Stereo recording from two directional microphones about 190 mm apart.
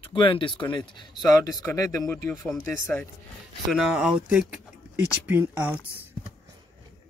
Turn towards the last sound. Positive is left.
turn(degrees=-10)  # may be behind; listen again after turning